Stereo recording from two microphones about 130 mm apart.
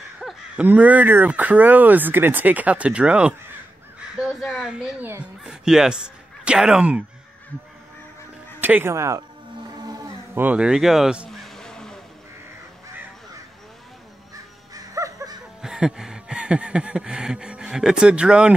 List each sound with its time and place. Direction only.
0.2 s a sound: 5° right (ahead or behind)
0.7 s speech: 10° right (ahead or behind)
4.4 s speech: 5° right (ahead or behind)
8.5 s speech: 15° right (ahead or behind)
9.8 s mantra: 30° right (ahead or behind)
10.3 s vehicle: 10° right (ahead or behind); by 12.0 s 5° left (ahead or behind)
14.3 s crow: 30° right (ahead or behind)
15.6 s a sound: 5° right (ahead or behind)